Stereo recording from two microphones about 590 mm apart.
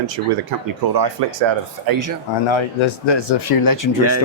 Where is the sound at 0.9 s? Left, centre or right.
Right.